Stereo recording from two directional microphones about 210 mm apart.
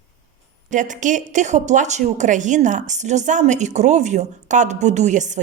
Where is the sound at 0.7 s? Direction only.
35° right (ahead or behind).